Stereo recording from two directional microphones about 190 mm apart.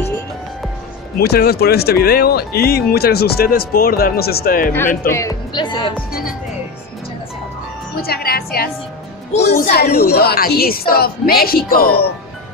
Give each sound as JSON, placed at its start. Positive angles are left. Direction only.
{"t": 1.2, "sound": "speech", "side_deg": 55}
{"t": 5.0, "sound": "speech", "side_deg": 15}
{"t": 7.9, "sound": "a woman's voice", "side_deg": 50}
{"t": 9.5, "sound": "speech", "side_deg": 35}
{"t": 9.8, "sound": "a woman's voice", "side_deg": 55}